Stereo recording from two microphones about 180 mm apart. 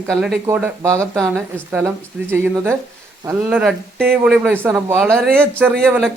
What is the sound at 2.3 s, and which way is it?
Speech, 15° right (ahead or behind).